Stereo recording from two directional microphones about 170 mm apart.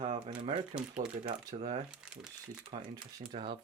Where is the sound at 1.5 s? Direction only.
40° right (ahead or behind).